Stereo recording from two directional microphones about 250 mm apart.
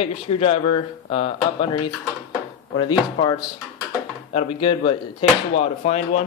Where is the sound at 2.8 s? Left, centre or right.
Centre.